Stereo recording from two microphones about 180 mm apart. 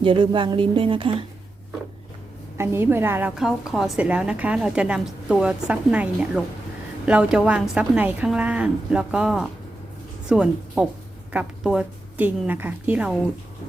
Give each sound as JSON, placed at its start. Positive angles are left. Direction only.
{"t": 0.0, "sound": "speech", "side_deg": -30}
{"t": 2.6, "sound": "a woman's voice", "side_deg": -15}